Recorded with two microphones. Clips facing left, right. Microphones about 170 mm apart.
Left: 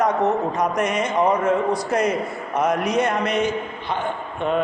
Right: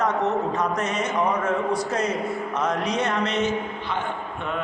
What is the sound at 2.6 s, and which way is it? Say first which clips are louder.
A man's voice: left 6 dB; 10° left (ahead or behind).